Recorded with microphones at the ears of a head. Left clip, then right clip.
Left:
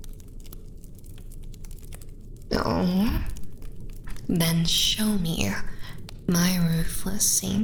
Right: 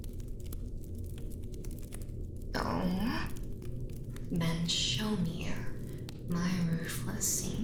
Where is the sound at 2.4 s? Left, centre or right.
Left.